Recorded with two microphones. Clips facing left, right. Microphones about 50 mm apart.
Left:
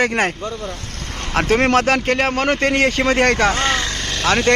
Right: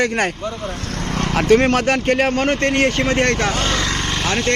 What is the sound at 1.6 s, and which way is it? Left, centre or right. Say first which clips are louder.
Speech: left 1 dB; left.